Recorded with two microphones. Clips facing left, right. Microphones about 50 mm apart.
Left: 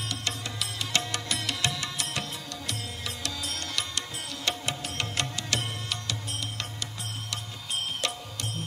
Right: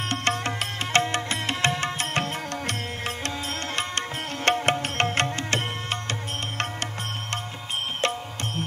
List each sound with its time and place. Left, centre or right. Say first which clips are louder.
0.1 s music: right 9 dB; right
4.5 s music: right 10 dB; right
8.0 s music: right 6 dB; right